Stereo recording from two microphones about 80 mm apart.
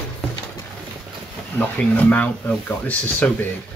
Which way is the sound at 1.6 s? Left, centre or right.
Centre.